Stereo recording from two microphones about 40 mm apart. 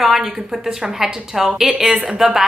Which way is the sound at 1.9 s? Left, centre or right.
Right.